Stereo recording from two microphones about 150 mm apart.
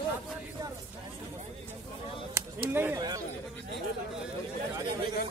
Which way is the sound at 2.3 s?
15° right (ahead or behind).